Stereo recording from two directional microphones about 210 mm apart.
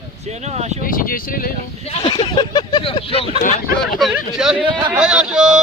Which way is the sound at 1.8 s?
25° left (ahead or behind).